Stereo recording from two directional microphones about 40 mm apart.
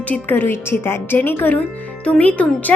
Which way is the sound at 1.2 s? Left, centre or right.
Left.